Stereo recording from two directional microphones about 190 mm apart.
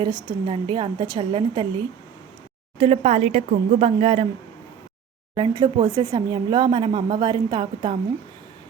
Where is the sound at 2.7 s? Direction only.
30° right (ahead or behind).